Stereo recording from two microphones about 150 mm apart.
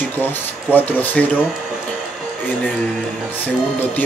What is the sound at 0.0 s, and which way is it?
Speech, 15° left (ahead or behind).